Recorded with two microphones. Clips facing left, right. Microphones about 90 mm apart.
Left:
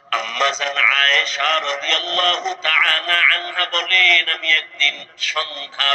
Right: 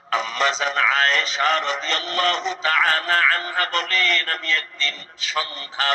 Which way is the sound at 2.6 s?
25° right (ahead or behind).